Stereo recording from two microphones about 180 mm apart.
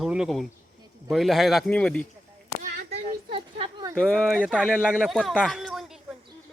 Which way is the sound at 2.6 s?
55° right (ahead or behind).